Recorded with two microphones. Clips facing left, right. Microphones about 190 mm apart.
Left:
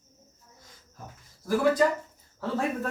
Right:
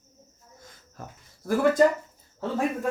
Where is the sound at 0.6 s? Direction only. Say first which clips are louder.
Right 5 dB; 55° right (ahead or behind).